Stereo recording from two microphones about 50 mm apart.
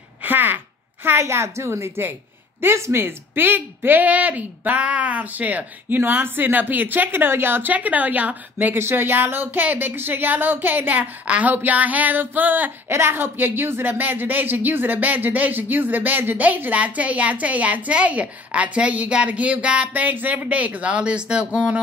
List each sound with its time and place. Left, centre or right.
0.2 s a sound: right
1.2 s a woman's voice: right
7.7 s speech: right
8.7 s speech: right
12.8 s speech: right; by 21.5 s centre